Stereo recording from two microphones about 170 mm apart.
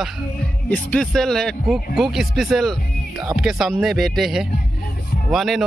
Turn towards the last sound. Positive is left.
turn(degrees=0)  # may be behind; listen again after turning